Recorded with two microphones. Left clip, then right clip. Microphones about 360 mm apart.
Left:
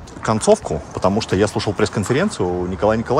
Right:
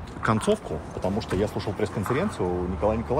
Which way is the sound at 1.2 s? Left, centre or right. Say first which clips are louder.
Left 9 dB; left.